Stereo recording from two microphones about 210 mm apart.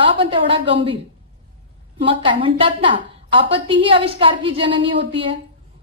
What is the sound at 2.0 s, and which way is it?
A woman's voice, 25° right (ahead or behind).